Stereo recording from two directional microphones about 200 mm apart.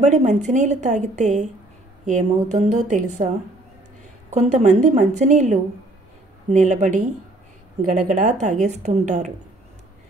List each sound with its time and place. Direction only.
0.0 s a woman's voice: 35° right (ahead or behind)
4.3 s a woman's voice: 35° right (ahead or behind)